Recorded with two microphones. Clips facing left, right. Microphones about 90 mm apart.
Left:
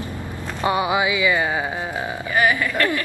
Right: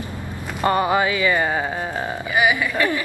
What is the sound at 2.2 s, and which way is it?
Speech, 10° right (ahead or behind).